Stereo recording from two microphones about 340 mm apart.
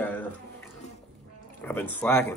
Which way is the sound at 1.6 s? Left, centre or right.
Centre.